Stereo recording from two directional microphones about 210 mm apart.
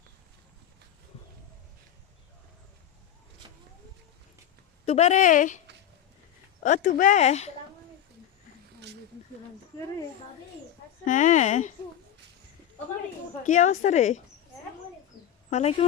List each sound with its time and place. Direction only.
4.9 s speech: 30° left (ahead or behind)
11.0 s speech: 35° left (ahead or behind)
13.4 s speech: 35° left (ahead or behind)
15.4 s speech: 35° left (ahead or behind)